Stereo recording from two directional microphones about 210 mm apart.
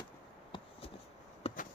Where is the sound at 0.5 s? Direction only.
25° left (ahead or behind).